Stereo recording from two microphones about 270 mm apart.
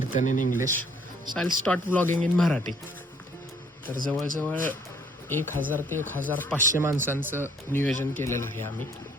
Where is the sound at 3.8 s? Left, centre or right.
Right.